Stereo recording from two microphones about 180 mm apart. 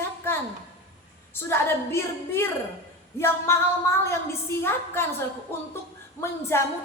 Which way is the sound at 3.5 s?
15° left (ahead or behind).